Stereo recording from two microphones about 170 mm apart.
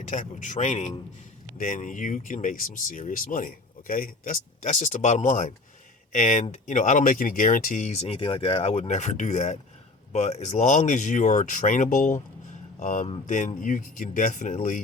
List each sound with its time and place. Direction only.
0.1 s speech: 45° left (ahead or behind)